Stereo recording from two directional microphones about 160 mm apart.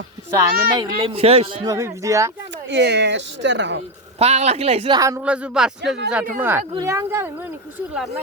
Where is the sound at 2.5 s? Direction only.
90° right.